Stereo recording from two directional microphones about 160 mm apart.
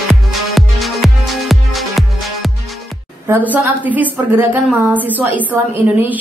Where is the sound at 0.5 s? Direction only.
Centre (ahead or behind).